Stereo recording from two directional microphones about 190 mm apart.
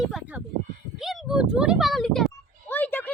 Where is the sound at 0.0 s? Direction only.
5° right (ahead or behind).